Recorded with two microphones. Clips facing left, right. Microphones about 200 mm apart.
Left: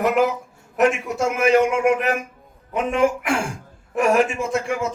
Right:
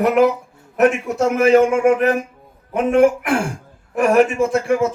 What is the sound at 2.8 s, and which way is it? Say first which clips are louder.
Speech: right 6 dB; 55° right (ahead or behind).